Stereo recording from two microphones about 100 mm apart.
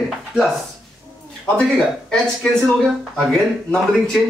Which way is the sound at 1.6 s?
10° left (ahead or behind).